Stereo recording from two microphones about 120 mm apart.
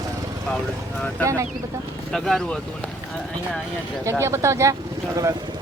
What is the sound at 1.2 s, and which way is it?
Speech, 25° right (ahead or behind).